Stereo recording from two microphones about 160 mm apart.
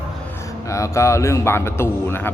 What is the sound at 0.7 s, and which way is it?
A man's voice, 20° left (ahead or behind).